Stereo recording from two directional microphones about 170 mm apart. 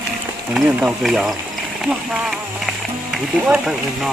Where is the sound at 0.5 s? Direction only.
Centre (ahead or behind).